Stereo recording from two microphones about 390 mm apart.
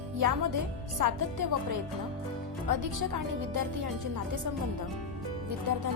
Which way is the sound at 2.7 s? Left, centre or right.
Right.